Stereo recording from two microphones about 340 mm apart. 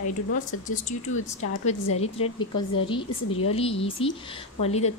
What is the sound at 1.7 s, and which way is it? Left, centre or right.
Speech, centre.